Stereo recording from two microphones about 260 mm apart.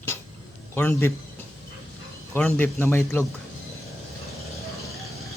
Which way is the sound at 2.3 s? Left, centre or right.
Centre.